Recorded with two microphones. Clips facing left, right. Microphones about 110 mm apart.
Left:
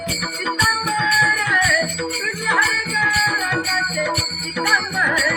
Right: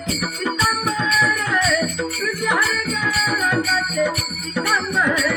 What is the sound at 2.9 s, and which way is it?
Music, 60° left (ahead or behind).